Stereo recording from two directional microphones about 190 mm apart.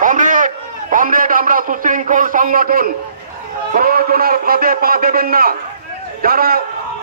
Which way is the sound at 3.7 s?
50° right (ahead or behind).